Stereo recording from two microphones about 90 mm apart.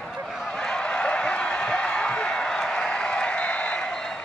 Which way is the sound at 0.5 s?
10° left (ahead or behind).